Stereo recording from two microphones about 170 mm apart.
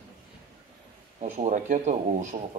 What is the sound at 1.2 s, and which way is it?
Speech, 45° right (ahead or behind).